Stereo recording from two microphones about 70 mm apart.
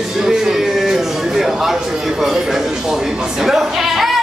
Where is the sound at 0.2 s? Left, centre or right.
Centre.